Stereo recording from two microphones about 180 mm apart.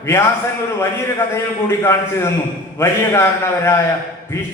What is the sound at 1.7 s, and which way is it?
A man's voice, 15° left (ahead or behind).